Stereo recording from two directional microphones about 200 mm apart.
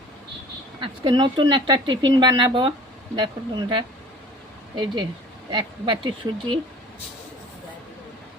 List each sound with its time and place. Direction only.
0.8 s speech: 20° right (ahead or behind)